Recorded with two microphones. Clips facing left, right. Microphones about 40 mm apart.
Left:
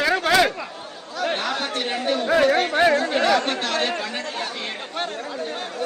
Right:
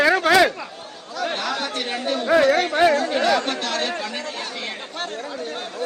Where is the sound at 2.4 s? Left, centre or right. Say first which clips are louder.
Even; left.